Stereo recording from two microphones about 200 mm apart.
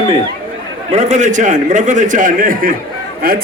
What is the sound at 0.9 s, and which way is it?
A man's voice, 35° right (ahead or behind).